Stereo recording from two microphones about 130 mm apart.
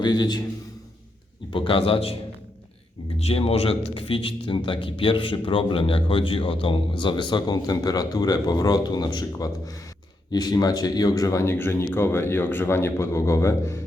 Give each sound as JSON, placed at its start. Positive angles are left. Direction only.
{"t": 0.0, "sound": "a man's voice", "side_deg": 30}
{"t": 1.5, "sound": "speech", "side_deg": 45}
{"t": 3.2, "sound": "a man's voice", "side_deg": 50}